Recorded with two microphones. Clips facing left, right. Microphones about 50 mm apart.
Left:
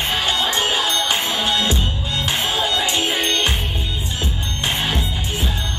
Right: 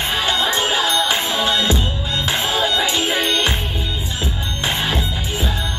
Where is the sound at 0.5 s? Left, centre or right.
Right.